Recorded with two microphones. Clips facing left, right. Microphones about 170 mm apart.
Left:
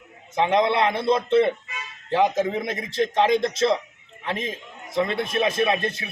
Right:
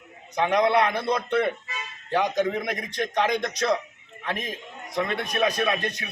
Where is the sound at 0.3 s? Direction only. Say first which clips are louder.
Left 1 dB; 25° left (ahead or behind).